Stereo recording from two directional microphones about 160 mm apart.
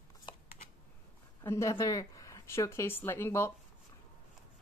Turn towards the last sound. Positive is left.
turn(degrees=15)  # may be behind; listen again after turning